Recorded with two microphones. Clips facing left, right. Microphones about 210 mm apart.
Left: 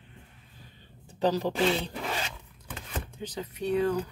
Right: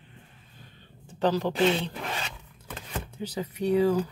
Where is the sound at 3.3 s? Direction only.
10° right (ahead or behind).